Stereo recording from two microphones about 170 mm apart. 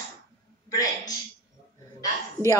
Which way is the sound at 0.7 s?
20° left (ahead or behind).